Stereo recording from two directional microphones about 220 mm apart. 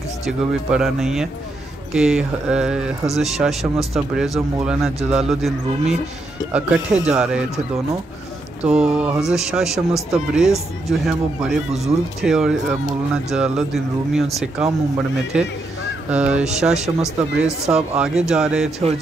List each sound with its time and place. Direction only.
0.2 s speech: 5° right (ahead or behind)
8.6 s speech: 5° right (ahead or behind)